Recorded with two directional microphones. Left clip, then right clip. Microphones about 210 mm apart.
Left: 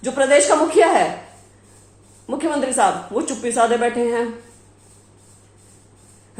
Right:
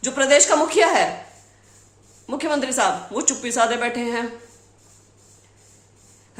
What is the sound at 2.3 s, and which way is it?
A woman's voice, 10° right (ahead or behind).